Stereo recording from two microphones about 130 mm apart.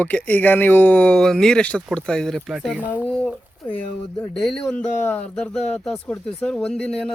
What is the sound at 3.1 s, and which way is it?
Speech, 10° left (ahead or behind).